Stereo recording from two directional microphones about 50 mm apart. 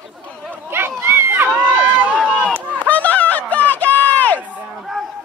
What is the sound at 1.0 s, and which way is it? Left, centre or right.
Run, right.